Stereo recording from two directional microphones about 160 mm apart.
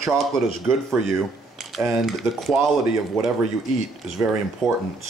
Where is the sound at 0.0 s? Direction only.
Centre (ahead or behind).